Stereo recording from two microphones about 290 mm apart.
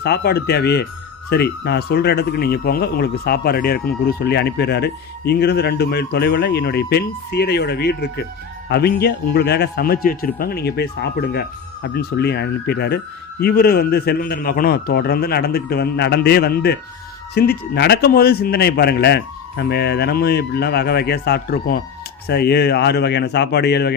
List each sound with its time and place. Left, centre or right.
0.0 s speech: left